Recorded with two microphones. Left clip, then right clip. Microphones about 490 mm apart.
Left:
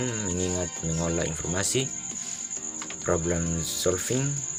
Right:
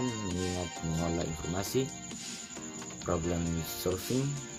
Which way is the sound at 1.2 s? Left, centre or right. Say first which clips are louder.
Left 7 dB; right.